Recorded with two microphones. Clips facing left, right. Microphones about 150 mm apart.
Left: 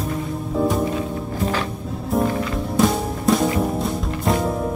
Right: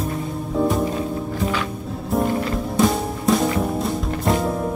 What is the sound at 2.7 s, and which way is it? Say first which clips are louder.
Music: left 1 dB; centre (ahead or behind).